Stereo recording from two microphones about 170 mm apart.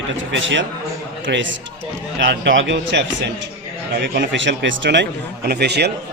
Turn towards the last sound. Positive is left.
turn(degrees=-75)  # may be behind; listen again after turning